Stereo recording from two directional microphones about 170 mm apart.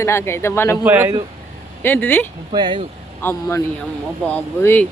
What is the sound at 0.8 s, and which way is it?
Speech, 10° right (ahead or behind).